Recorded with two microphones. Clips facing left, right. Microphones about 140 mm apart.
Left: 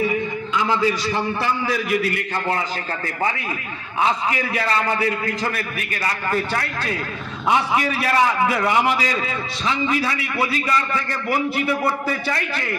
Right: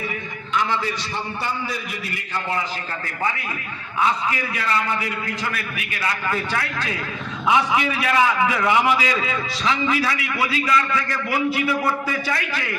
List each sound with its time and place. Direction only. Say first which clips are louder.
1.1 s a man's voice: left 5 dB; 90° left; by 2.2 s 70° left (ahead or behind)
4.0 s a man's voice: left 1 dB; 25° left (ahead or behind)